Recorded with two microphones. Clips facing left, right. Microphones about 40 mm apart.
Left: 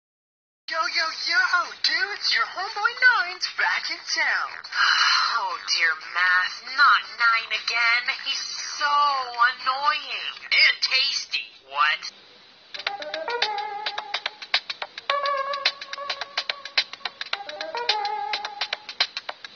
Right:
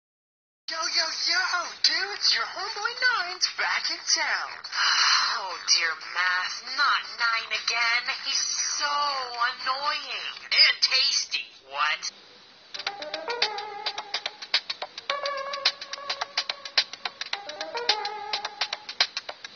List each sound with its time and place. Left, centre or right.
0.7 s speech: left
4.5 s speech: left
4.7 s speech: centre
11.0 s speech: left
12.7 s music: left
18.7 s a sound: left